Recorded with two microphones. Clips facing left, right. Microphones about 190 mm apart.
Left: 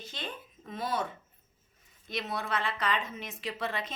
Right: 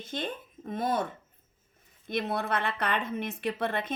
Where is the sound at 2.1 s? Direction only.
55° right (ahead or behind).